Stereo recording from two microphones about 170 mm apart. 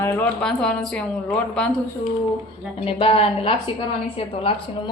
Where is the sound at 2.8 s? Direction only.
35° left (ahead or behind).